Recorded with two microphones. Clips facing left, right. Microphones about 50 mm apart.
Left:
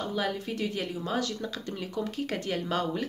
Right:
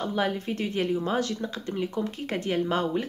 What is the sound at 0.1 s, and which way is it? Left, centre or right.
Speech, right.